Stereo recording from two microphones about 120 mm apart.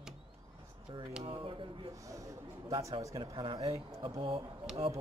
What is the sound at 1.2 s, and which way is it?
Speech, 50° right (ahead or behind).